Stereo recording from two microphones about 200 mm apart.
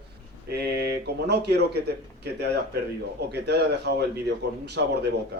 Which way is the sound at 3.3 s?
55° right (ahead or behind).